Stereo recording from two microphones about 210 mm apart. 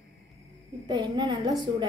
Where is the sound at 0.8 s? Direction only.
20° right (ahead or behind).